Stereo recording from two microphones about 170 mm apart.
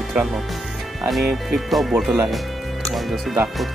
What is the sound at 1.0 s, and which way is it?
Speech, centre (ahead or behind).